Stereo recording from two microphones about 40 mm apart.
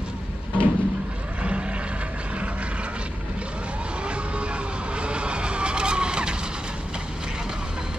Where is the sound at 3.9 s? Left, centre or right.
Right.